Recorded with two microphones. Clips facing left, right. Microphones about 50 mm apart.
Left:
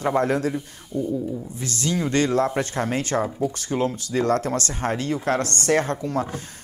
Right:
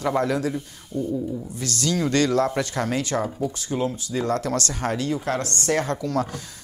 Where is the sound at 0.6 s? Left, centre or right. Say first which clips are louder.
Left 1 dB; centre.